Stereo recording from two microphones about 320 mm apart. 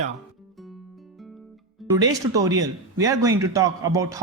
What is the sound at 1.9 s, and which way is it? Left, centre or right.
A man's voice, centre.